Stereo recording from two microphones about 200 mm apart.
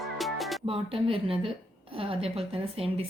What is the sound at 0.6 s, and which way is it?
A woman's voice, 30° right (ahead or behind).